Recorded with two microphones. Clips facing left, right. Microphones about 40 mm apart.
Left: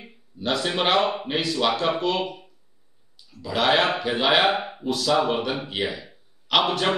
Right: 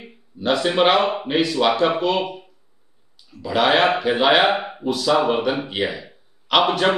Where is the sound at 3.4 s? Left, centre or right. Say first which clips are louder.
Right 4 dB; centre.